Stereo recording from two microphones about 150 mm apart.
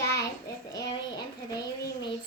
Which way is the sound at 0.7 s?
25° left (ahead or behind).